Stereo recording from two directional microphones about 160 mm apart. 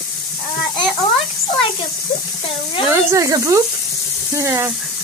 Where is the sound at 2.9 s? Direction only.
20° right (ahead or behind).